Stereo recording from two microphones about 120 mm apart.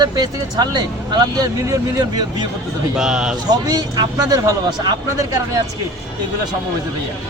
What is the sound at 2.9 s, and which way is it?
Speech, 5° right (ahead or behind).